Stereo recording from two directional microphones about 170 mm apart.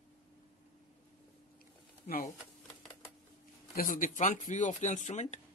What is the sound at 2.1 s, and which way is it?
Speech, 50° left (ahead or behind).